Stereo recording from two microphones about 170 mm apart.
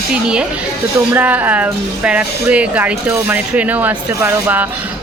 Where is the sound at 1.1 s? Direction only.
10° right (ahead or behind).